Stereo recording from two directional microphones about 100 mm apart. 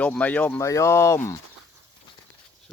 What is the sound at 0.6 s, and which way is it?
Speech, 30° left (ahead or behind).